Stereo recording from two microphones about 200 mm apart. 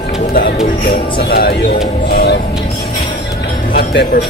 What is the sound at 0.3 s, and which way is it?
Speech, 50° left (ahead or behind).